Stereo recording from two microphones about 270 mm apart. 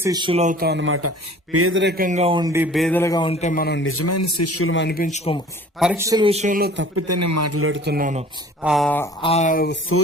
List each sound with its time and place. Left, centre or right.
0.0 s a man's voice: centre
2.7 s a man's voice: centre; by 5.4 s left
5.8 s a man's voice: centre; by 6.8 s right
6.9 s a man's voice: right
7.9 s a man's voice: right
8.6 s a sound: centre
9.2 s a sound: left